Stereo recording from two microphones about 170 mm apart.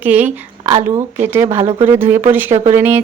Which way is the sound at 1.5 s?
40° right (ahead or behind).